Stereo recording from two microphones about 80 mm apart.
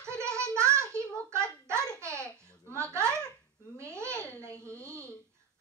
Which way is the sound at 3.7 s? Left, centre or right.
Right.